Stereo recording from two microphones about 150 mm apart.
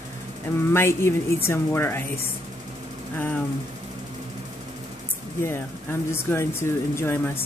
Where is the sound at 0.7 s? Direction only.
15° left (ahead or behind).